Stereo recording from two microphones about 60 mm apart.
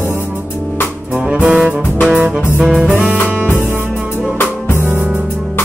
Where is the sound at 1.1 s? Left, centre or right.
Centre.